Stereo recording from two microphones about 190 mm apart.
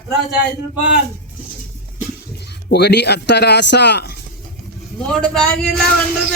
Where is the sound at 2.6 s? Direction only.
60° left (ahead or behind).